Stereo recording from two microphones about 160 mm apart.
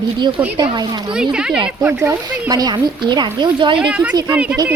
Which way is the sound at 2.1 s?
20° right (ahead or behind).